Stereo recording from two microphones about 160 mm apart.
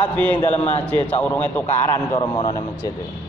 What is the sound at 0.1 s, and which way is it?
A man's voice, 10° left (ahead or behind).